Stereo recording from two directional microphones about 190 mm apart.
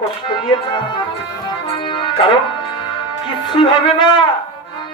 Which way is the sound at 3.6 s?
25° left (ahead or behind).